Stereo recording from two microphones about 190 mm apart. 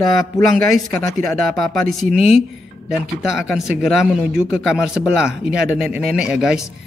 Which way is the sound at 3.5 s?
Centre (ahead or behind).